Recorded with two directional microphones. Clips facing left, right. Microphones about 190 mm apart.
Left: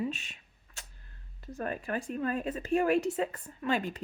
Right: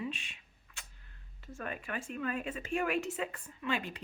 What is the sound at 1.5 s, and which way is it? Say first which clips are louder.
Speech: left 6 dB; 35° left (ahead or behind).